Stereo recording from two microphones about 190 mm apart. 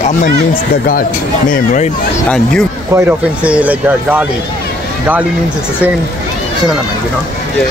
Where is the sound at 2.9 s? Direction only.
10° right (ahead or behind).